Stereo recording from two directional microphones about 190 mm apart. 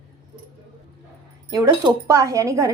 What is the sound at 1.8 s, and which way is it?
Speech, 15° right (ahead or behind).